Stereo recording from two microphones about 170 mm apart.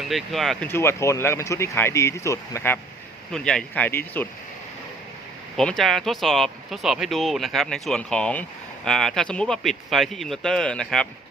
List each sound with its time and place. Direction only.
0.1 s speech: centre (ahead or behind)
0.7 s speech: 15° left (ahead or behind)
3.3 s speech: 5° left (ahead or behind)
5.5 s speech: centre (ahead or behind)